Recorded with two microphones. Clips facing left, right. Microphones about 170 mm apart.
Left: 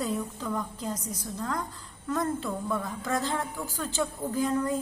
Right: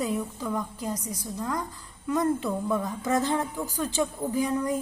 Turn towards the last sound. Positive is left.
turn(degrees=-15)  # may be behind; listen again after turning